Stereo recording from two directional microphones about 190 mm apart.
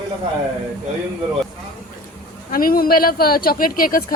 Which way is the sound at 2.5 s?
50° left (ahead or behind).